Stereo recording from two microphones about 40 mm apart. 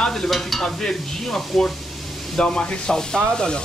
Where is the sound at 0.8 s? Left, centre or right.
Centre.